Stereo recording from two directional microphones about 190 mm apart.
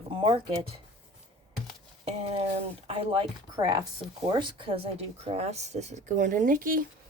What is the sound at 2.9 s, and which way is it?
Speech, 30° right (ahead or behind).